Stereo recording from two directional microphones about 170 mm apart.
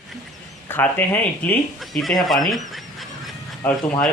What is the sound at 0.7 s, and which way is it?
Speech, 10° left (ahead or behind).